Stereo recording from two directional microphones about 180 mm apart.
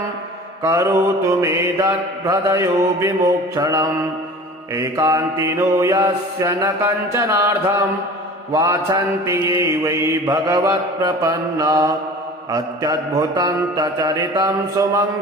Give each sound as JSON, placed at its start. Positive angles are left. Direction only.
{"t": 0.6, "sound": "mantra", "side_deg": -15}